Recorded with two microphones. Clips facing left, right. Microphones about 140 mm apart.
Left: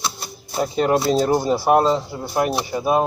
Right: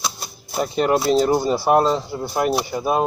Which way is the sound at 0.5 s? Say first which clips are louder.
Even; centre (ahead or behind).